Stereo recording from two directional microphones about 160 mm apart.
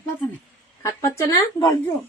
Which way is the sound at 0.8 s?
20° left (ahead or behind).